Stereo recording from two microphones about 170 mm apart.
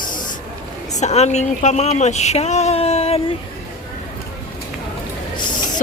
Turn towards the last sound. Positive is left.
turn(degrees=25)  # may be behind; listen again after turning